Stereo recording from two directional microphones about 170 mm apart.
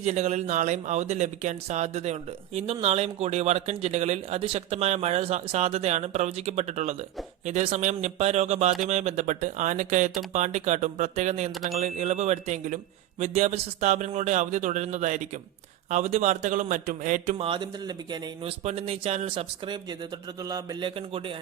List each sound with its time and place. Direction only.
0.0 s speech: 40° right (ahead or behind)
17.3 s speech: 30° right (ahead or behind)
18.6 s speech: 35° right (ahead or behind)